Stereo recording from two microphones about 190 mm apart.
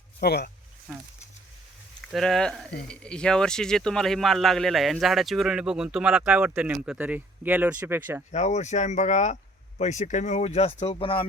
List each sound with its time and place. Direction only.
0.2 s speech: 55° left (ahead or behind)
0.9 s speech: centre (ahead or behind)
2.1 s speech: centre (ahead or behind)
8.3 s speech: 35° left (ahead or behind)